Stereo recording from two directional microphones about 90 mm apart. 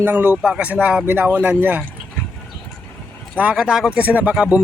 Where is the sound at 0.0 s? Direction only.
25° right (ahead or behind).